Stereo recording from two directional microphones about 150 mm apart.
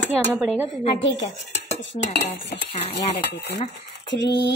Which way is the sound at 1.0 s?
50° left (ahead or behind).